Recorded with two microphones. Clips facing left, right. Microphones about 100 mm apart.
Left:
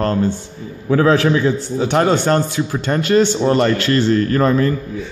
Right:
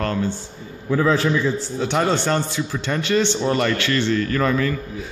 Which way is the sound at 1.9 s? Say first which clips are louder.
Left 5 dB; 50° left (ahead or behind).